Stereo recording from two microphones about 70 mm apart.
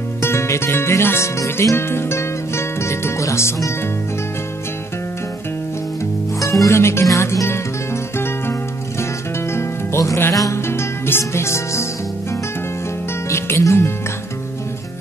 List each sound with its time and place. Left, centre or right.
0.2 s speech: left
6.4 s music: left
10.3 s music: left
10.7 s music: left
13.3 s speech: left